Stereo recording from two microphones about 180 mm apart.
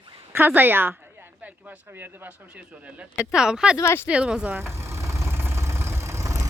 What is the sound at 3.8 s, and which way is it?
Speech, 15° left (ahead or behind).